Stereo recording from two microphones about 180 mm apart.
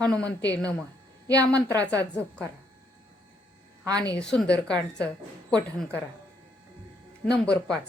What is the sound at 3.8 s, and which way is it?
Speech, 20° right (ahead or behind).